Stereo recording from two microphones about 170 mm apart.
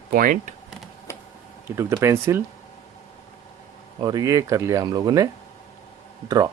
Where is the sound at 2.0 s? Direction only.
15° right (ahead or behind).